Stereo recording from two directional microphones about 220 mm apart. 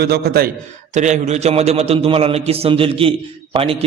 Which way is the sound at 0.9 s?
35° right (ahead or behind).